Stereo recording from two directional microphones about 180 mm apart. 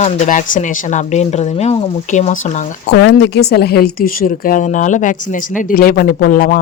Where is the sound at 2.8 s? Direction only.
70° left (ahead or behind).